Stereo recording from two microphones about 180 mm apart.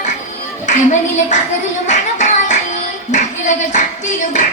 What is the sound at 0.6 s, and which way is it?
Speech, 40° left (ahead or behind).